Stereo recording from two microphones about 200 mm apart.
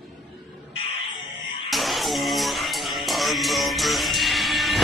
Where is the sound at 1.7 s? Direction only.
Centre (ahead or behind).